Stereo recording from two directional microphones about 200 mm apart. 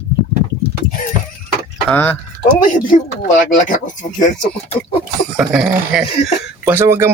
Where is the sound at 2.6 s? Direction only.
40° left (ahead or behind).